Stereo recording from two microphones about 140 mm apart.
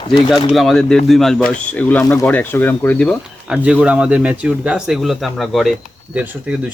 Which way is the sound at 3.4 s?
5° right (ahead or behind).